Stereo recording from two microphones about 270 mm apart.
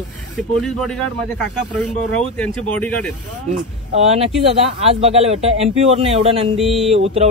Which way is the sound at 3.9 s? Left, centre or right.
Right.